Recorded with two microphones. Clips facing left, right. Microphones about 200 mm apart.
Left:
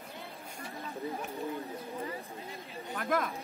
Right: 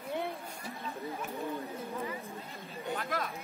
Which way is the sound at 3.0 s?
50° left (ahead or behind).